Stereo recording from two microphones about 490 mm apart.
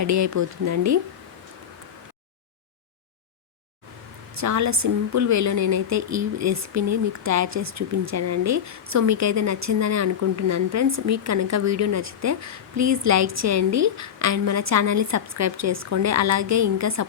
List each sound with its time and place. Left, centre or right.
0.0 s a woman's voice: right
4.4 s a woman's voice: right